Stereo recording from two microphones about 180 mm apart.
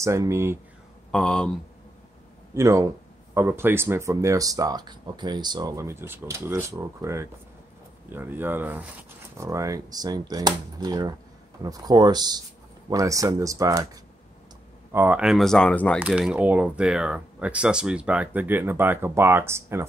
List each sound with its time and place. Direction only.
0.0 s speech: 15° right (ahead or behind)
1.1 s speech: 5° left (ahead or behind)
2.5 s speech: 15° right (ahead or behind)
14.9 s speech: 10° right (ahead or behind); by 16.0 s 5° left (ahead or behind)
16.0 s speech: 5° right (ahead or behind)